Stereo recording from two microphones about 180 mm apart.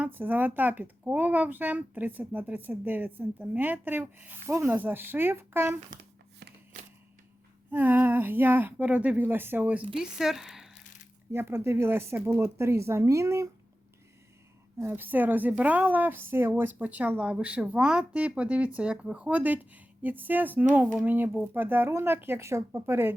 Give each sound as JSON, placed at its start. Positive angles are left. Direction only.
{"t": 0.0, "sound": "speech", "side_deg": -10}
{"t": 5.9, "sound": "tearing", "side_deg": -60}
{"t": 6.7, "sound": "typewriter", "side_deg": -45}
{"t": 7.7, "sound": "speech", "side_deg": -10}
{"t": 11.3, "sound": "speech", "side_deg": -15}
{"t": 14.8, "sound": "speech", "side_deg": -10}